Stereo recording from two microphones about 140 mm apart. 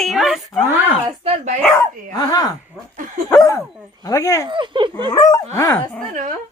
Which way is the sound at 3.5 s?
20° left (ahead or behind).